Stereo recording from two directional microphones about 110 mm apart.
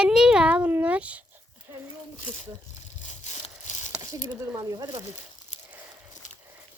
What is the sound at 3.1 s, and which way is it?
Tearing, 90° left.